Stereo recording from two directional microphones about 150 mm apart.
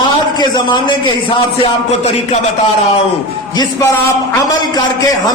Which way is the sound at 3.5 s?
25° left (ahead or behind).